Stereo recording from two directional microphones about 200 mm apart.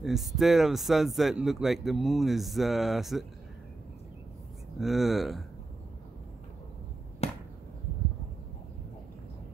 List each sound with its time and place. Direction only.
0.0 s speech: centre (ahead or behind)
4.7 s speech: centre (ahead or behind)
7.2 s a sound: 30° left (ahead or behind)